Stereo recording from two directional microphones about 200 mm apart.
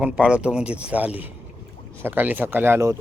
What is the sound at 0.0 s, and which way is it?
Speech, 5° right (ahead or behind).